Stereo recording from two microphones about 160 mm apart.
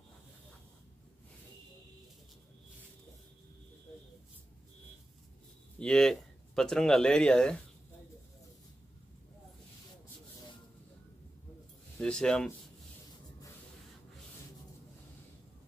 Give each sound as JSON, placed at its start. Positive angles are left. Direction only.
{"t": 5.8, "sound": "speech", "side_deg": 5}
{"t": 12.0, "sound": "speech", "side_deg": 5}